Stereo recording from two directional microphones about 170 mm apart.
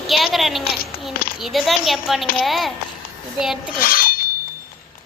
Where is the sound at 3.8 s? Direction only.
60° left (ahead or behind).